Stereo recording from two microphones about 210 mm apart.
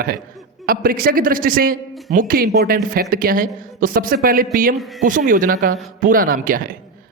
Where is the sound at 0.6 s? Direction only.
45° right (ahead or behind).